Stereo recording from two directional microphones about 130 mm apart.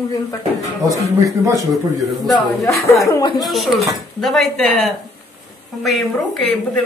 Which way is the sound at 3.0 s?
30° left (ahead or behind).